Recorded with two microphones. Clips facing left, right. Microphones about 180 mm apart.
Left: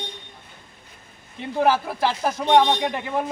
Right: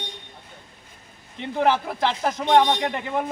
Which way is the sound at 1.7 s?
10° left (ahead or behind).